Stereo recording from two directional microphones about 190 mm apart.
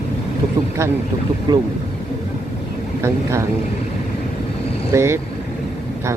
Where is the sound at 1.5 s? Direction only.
25° right (ahead or behind).